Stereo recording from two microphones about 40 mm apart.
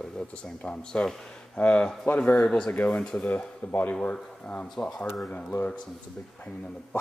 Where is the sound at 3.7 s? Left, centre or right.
Left.